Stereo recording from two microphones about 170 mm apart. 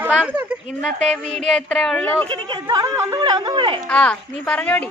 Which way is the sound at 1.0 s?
Centre (ahead or behind).